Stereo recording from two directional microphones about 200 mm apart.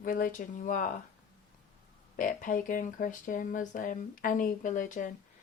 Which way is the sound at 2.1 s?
45° left (ahead or behind).